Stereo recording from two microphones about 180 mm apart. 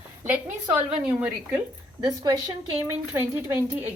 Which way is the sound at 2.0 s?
25° right (ahead or behind).